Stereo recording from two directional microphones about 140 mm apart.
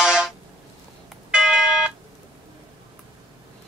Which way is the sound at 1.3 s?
5° right (ahead or behind).